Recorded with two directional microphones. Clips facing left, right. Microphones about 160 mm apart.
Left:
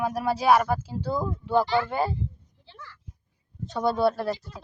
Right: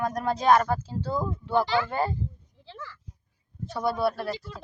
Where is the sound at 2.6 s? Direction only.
90° right.